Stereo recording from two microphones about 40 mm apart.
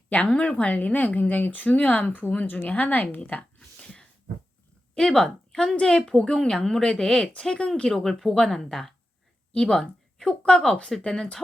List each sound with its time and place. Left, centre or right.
0.3 s speech: left
3.8 s a sound: left
4.9 s a woman's voice: centre
8.0 s speech: centre
9.5 s speech: centre